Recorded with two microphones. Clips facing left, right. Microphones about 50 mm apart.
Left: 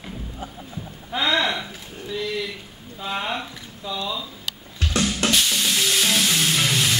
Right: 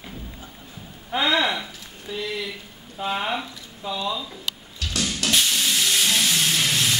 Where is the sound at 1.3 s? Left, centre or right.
Centre.